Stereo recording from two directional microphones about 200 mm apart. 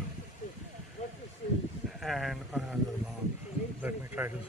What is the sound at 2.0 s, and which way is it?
Speech, centre (ahead or behind).